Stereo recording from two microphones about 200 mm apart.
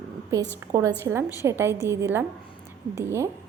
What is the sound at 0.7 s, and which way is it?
A woman's voice, 15° right (ahead or behind).